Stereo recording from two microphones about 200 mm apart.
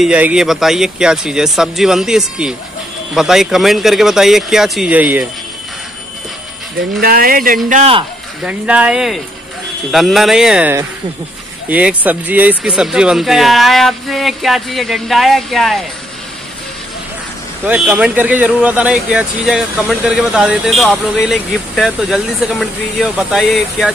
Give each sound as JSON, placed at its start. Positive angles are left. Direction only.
{"t": 0.0, "sound": "speech", "side_deg": -5}
{"t": 7.0, "sound": "speech", "side_deg": -45}
{"t": 7.7, "sound": "speech", "side_deg": -30}
{"t": 8.5, "sound": "speech", "side_deg": -5}
{"t": 17.6, "sound": "speech", "side_deg": -5}